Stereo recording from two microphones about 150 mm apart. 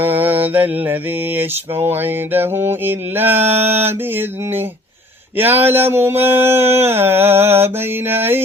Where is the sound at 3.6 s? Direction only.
45° right (ahead or behind).